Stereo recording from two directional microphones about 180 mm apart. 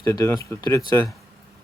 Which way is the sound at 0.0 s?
15° left (ahead or behind).